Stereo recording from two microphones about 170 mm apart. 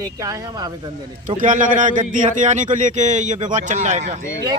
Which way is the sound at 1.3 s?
50° right (ahead or behind).